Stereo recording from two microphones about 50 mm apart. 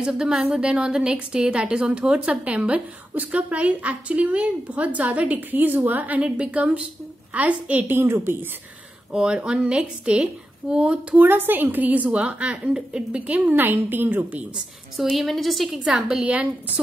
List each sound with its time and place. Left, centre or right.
0.0 s a woman's voice: right
7.9 s a woman's voice: right
9.1 s a woman's voice: centre
11.1 s a woman's voice: right; by 13.2 s centre
13.3 s a woman's voice: right
15.0 s a woman's voice: centre
16.3 s a woman's voice: right